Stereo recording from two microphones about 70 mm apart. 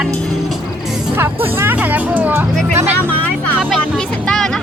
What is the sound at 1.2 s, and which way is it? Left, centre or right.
Speech, right.